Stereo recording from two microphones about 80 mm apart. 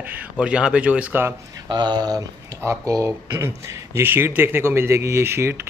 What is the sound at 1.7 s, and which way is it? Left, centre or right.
Speech, right.